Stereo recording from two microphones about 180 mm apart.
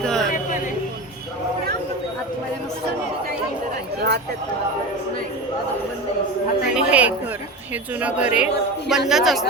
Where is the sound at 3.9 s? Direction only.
65° right (ahead or behind).